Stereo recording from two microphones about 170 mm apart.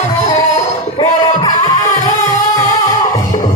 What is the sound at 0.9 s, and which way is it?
Music, 25° left (ahead or behind).